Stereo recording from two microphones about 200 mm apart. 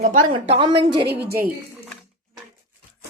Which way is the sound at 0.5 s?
25° right (ahead or behind).